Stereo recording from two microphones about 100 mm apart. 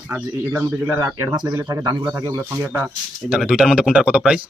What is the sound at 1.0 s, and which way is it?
Speech, 30° right (ahead or behind).